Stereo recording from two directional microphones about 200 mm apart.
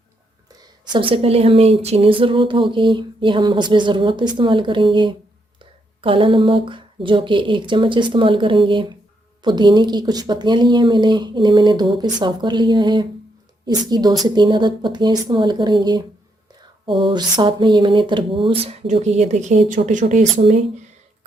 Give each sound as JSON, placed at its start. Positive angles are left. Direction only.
{"t": 0.9, "sound": "speech", "side_deg": -25}